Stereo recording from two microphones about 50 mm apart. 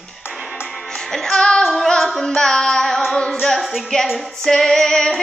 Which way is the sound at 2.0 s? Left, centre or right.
Centre.